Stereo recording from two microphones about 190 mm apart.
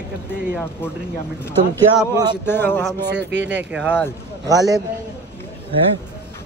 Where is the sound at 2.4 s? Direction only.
10° left (ahead or behind).